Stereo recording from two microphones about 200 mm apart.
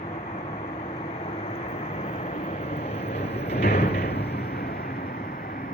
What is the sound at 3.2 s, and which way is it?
Vehicle, 30° left (ahead or behind).